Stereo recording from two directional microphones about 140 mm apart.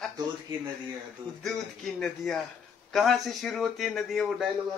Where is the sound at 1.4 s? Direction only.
5° left (ahead or behind).